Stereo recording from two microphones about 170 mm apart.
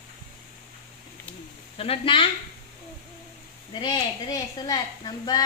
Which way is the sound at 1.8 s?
35° left (ahead or behind).